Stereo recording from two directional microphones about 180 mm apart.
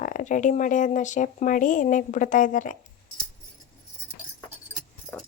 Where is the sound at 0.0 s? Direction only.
45° left (ahead or behind).